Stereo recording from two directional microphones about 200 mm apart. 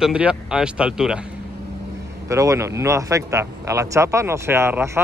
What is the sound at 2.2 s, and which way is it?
Speech, 15° right (ahead or behind).